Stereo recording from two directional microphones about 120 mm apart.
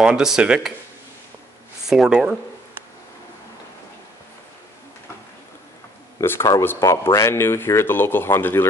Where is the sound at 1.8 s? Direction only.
5° right (ahead or behind).